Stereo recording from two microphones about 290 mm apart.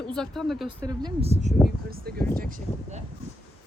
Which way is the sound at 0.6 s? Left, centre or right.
Centre.